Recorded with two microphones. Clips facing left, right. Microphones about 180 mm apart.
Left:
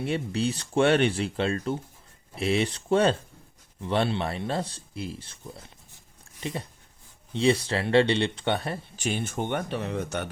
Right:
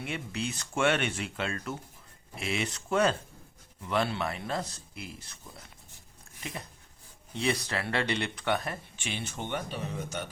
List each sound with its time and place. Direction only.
0.0 s speech: 35° left (ahead or behind)
9.0 s speech: 50° left (ahead or behind); by 10.2 s 65° left (ahead or behind)